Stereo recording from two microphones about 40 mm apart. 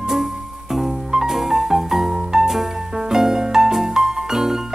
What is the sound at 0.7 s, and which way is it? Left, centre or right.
Music, centre.